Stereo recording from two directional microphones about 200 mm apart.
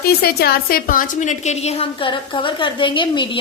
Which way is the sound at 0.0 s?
50° left (ahead or behind).